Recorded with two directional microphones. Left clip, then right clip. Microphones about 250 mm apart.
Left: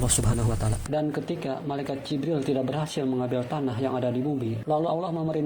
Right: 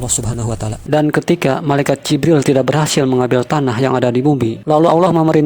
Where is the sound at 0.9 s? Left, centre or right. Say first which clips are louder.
Right 15 dB; right.